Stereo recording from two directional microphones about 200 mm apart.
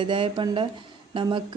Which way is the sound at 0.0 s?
25° right (ahead or behind).